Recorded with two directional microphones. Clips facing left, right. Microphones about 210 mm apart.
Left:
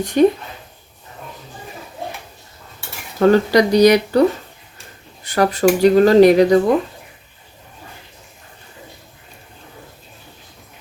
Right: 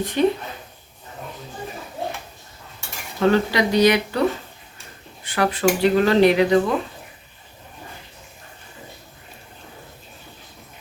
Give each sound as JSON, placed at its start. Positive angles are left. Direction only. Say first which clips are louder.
{"t": 0.0, "sound": "speech", "louder": "left 6 dB", "side_deg": 45}
{"t": 3.2, "sound": "speech", "louder": "left 6 dB", "side_deg": 40}
{"t": 5.2, "sound": "speech", "louder": "left 5 dB", "side_deg": 40}